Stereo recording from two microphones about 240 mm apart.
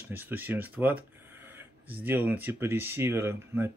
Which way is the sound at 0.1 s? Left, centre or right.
Centre.